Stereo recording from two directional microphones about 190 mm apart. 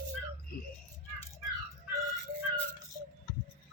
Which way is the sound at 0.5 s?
50° left (ahead or behind).